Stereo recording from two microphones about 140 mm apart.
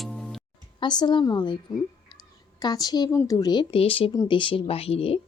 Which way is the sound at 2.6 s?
30° left (ahead or behind).